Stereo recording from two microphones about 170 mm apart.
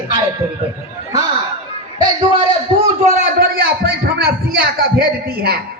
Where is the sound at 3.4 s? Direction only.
65° right (ahead or behind).